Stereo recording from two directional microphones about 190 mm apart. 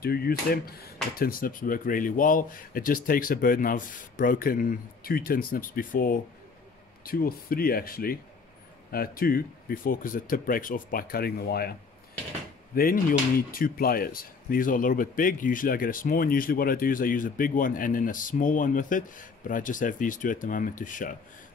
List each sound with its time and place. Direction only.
0.0 s speech: 55° left (ahead or behind)
12.7 s speech: 50° left (ahead or behind)